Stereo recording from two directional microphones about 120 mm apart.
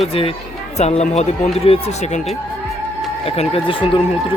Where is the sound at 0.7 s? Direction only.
65° left (ahead or behind).